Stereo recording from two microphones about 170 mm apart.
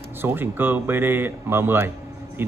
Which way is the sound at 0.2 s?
10° right (ahead or behind).